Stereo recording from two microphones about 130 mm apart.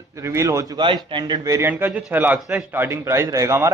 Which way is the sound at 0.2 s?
20° right (ahead or behind).